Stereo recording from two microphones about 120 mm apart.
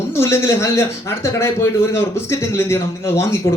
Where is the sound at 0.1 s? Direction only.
25° left (ahead or behind).